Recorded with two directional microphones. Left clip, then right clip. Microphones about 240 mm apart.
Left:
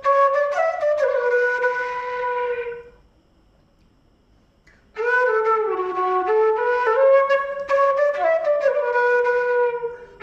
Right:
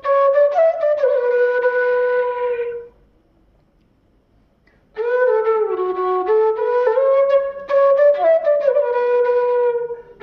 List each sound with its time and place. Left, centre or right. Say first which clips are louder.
0.0 s flute: right 3 dB; centre
4.6 s flute: right 1 dB; centre